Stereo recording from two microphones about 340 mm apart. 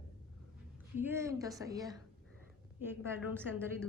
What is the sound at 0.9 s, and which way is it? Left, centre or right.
A woman's voice, centre.